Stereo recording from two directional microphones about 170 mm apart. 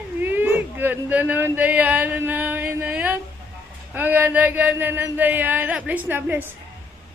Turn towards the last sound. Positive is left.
turn(degrees=-10)  # may be behind; listen again after turning